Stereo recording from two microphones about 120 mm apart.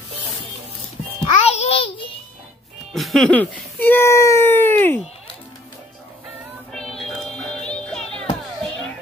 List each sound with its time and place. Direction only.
1.2 s music: 60° left (ahead or behind)
2.9 s music: centre (ahead or behind)
3.3 s speech: 15° left (ahead or behind)
6.7 s music: 5° left (ahead or behind)